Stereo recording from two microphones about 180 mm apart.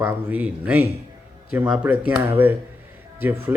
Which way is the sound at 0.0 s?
10° right (ahead or behind).